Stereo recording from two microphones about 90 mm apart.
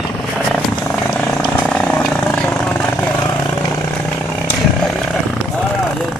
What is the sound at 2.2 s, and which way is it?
Vehicle, 10° left (ahead or behind).